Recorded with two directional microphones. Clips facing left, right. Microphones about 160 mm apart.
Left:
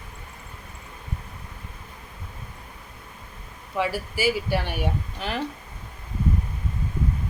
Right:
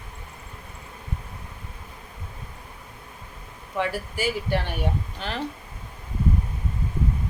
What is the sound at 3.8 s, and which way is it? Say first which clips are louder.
Speech: left 2 dB; 5° left (ahead or behind).